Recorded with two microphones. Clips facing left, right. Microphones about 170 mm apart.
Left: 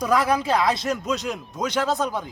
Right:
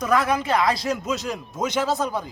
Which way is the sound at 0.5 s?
Centre (ahead or behind).